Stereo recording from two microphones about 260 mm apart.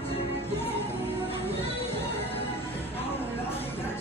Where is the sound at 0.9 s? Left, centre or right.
Left.